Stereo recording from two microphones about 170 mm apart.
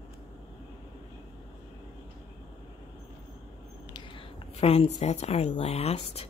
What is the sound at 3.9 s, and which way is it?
A woman's voice, 35° left (ahead or behind).